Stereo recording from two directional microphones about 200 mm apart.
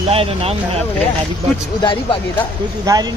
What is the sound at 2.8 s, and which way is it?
Speech, 15° right (ahead or behind).